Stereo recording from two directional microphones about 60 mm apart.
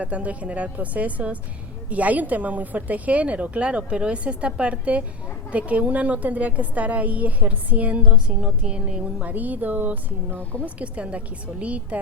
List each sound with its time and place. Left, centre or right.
0.0 s a woman's voice: right
9.2 s a woman's voice: right